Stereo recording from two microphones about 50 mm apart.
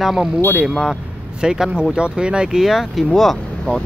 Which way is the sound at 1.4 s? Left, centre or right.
Centre.